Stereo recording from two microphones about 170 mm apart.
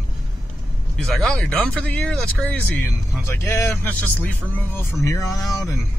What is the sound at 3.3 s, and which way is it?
Speech, 15° left (ahead or behind).